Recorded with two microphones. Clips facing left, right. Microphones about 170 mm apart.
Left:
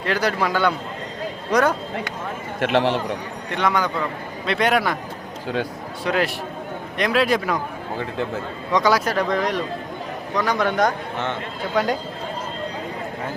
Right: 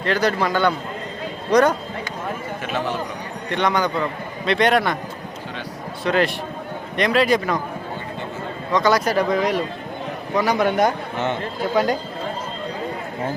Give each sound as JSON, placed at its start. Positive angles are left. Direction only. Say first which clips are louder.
{"t": 0.0, "sound": "a man's voice", "louder": "right 2 dB", "side_deg": 10}
{"t": 2.6, "sound": "a man's voice", "louder": "left 8 dB", "side_deg": 80}
{"t": 3.5, "sound": "speech", "louder": "right 1 dB", "side_deg": 5}
{"t": 6.1, "sound": "a man's voice", "louder": "right 2 dB", "side_deg": 5}
{"t": 8.7, "sound": "a man's voice", "louder": "right 1 dB", "side_deg": 10}